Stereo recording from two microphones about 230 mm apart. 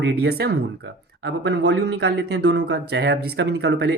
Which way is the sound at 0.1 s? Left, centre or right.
Right.